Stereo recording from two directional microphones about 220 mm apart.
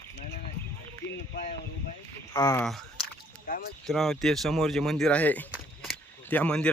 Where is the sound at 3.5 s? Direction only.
40° left (ahead or behind).